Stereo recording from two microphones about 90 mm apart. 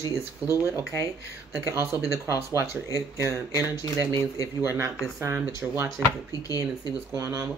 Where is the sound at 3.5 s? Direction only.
40° left (ahead or behind).